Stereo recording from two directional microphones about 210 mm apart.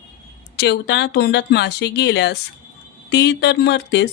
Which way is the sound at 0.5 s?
55° left (ahead or behind).